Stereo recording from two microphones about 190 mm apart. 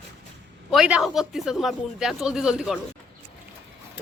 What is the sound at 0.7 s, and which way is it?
Speech, 5° right (ahead or behind).